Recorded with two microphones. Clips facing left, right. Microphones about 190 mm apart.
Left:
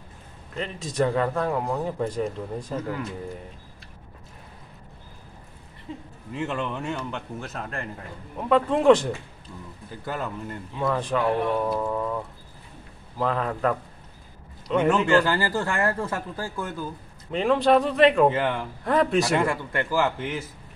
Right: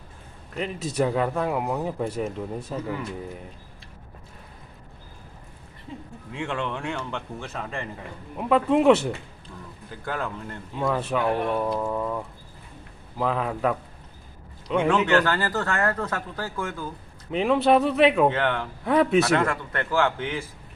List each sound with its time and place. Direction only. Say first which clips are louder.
0.6 s speech: even; 10° right (ahead or behind)
6.3 s speech: left 1 dB; 5° left (ahead or behind)
9.8 s speech: right 1 dB; 5° left (ahead or behind)
13.2 s speech: even; 5° right (ahead or behind)
15.0 s speech: left 1 dB; 10° left (ahead or behind)
17.3 s speech: even; 5° right (ahead or behind)
18.3 s speech: even; 10° left (ahead or behind)
18.9 s speech: right 2 dB; 5° right (ahead or behind)
19.3 s speech: even; 10° left (ahead or behind)